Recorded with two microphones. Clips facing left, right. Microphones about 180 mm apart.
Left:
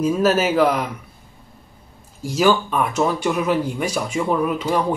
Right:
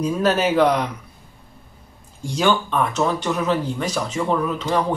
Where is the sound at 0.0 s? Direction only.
5° left (ahead or behind).